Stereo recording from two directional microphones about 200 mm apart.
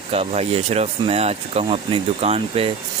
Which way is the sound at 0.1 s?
30° right (ahead or behind).